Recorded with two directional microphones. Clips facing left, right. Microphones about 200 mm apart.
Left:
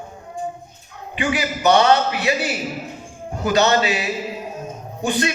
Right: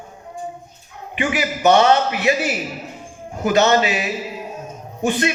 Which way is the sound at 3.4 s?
20° right (ahead or behind).